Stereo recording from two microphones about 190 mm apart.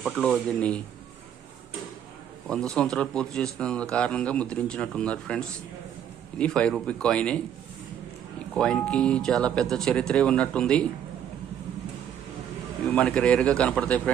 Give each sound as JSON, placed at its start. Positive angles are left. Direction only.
{"t": 0.0, "sound": "a man's voice", "side_deg": 0}
{"t": 2.5, "sound": "a man's voice", "side_deg": 5}
{"t": 6.4, "sound": "a man's voice", "side_deg": 5}
{"t": 8.5, "sound": "a man's voice", "side_deg": 5}
{"t": 12.9, "sound": "a man's voice", "side_deg": 5}